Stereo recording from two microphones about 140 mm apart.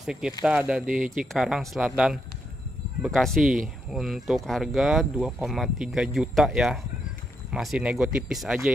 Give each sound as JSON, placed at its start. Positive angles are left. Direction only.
{"t": 0.0, "sound": "speech", "side_deg": -5}
{"t": 0.8, "sound": "speech", "side_deg": -70}
{"t": 1.1, "sound": "speech", "side_deg": 0}